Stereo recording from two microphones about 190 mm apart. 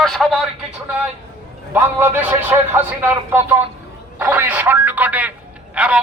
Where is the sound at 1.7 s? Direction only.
10° right (ahead or behind).